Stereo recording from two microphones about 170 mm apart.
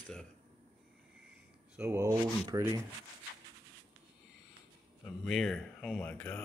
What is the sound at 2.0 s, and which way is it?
Speech, 20° right (ahead or behind).